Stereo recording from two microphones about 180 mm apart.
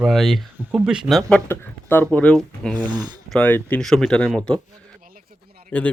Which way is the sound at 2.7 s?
25° right (ahead or behind).